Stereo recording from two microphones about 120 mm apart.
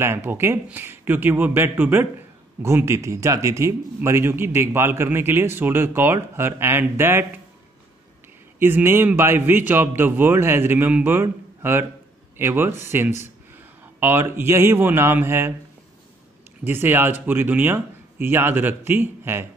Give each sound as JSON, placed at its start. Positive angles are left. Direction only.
{"t": 0.0, "sound": "a man's voice", "side_deg": -20}
{"t": 8.5, "sound": "a man's voice", "side_deg": -20}
{"t": 16.6, "sound": "a man's voice", "side_deg": -15}